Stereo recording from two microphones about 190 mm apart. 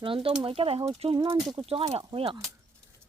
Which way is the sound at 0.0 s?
30° right (ahead or behind).